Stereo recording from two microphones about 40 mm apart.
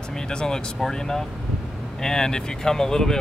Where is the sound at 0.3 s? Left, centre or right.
Centre.